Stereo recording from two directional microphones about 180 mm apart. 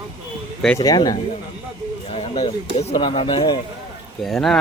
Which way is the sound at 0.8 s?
20° left (ahead or behind).